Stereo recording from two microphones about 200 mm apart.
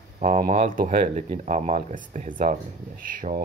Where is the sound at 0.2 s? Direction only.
40° right (ahead or behind).